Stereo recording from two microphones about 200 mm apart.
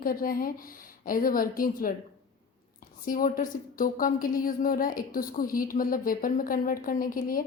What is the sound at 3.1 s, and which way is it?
A woman's voice, 40° left (ahead or behind).